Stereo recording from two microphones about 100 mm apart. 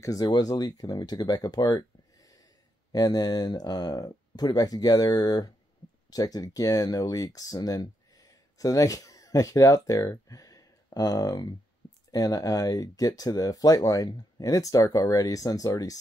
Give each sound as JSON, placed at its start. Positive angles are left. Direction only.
{"t": 0.0, "sound": "speech", "side_deg": 35}